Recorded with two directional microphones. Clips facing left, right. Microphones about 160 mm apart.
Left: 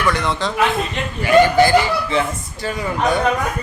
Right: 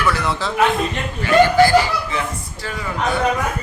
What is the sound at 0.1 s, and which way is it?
Speech, 5° right (ahead or behind).